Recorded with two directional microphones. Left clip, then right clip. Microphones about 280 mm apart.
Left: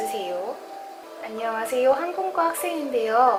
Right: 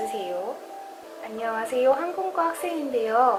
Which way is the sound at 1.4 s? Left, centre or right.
Centre.